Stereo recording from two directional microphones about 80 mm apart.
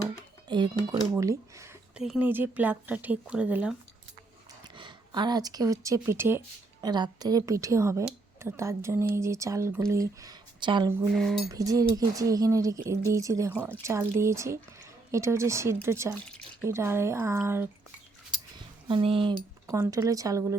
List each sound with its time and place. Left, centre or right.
0.4 s speech: right
1.2 s a woman's voice: right
2.1 s speech: right
4.7 s speech: right
6.1 s a woman's voice: right
6.8 s a woman's voice: right
10.6 s a woman's voice: right
11.1 s cutlery: centre
11.5 s a woman's voice: right
18.9 s speech: right
19.6 s speech: right